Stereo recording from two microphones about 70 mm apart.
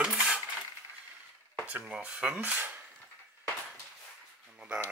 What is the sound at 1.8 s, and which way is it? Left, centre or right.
Speech, centre.